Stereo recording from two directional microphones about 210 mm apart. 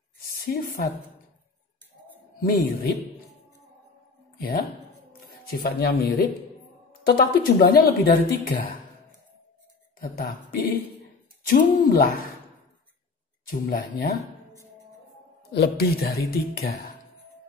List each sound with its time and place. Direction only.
0.2 s a woman's voice: 45° left (ahead or behind)
2.4 s speech: 45° left (ahead or behind)
5.5 s speech: 50° left (ahead or behind)
9.9 s speech: 45° left (ahead or behind)
13.5 s speech: 45° left (ahead or behind)
15.5 s speech: 50° left (ahead or behind)